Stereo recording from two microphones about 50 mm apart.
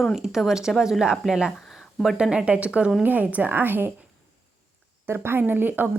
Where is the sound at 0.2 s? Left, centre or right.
Centre.